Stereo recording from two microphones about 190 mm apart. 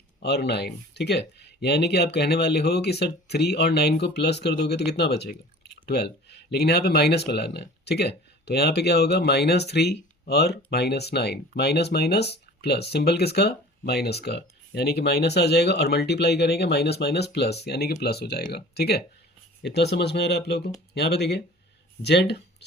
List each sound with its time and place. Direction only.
0.2 s speech: 60° left (ahead or behind)